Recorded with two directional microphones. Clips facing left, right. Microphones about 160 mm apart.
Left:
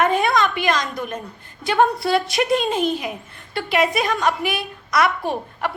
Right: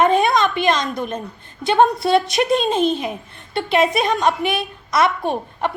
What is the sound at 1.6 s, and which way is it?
A woman's voice, 20° right (ahead or behind).